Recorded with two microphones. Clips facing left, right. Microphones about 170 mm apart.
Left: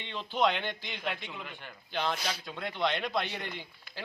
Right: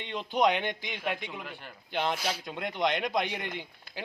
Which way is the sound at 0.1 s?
15° right (ahead or behind).